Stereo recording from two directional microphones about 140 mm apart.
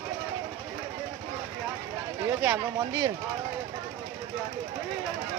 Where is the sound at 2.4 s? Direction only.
15° right (ahead or behind).